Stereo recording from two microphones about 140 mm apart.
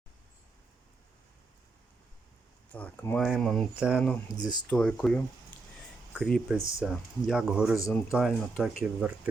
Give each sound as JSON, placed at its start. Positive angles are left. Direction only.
{"t": 2.7, "sound": "speech", "side_deg": 10}
{"t": 3.2, "sound": "speech", "side_deg": 0}
{"t": 4.3, "sound": "speech", "side_deg": 30}
{"t": 4.7, "sound": "speech", "side_deg": 10}